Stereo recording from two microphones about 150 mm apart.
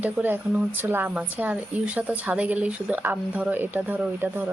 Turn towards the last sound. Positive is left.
turn(degrees=-10)  # may be behind; listen again after turning